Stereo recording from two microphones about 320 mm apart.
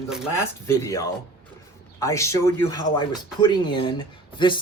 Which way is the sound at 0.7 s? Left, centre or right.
Centre.